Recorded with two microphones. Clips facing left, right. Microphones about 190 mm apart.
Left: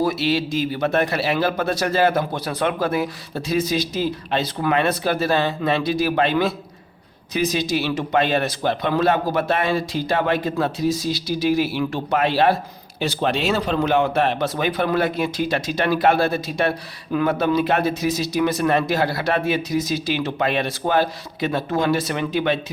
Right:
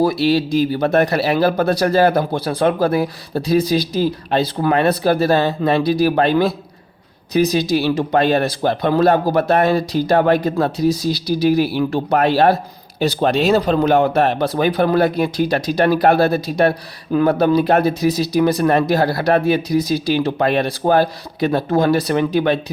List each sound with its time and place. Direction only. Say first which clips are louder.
0.0 s speech: right 5 dB; 35° right (ahead or behind)